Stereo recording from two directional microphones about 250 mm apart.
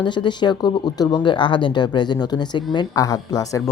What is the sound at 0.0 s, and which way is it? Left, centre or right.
Speech, centre.